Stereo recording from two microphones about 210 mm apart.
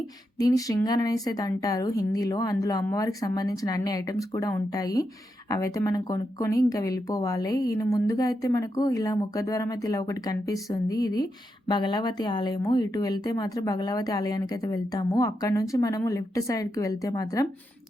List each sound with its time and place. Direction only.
0.3 s speech: 15° left (ahead or behind)